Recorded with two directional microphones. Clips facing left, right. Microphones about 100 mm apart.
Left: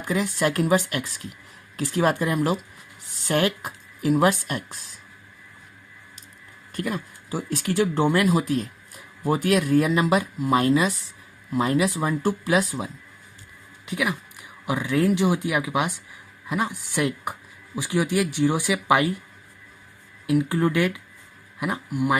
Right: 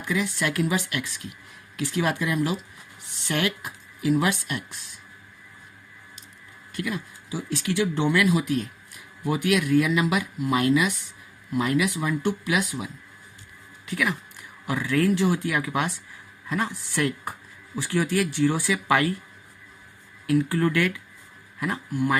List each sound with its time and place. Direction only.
0.0 s speech: 40° left (ahead or behind)
6.7 s speech: 45° left (ahead or behind)
13.8 s speech: 15° left (ahead or behind)
20.2 s speech: 20° left (ahead or behind)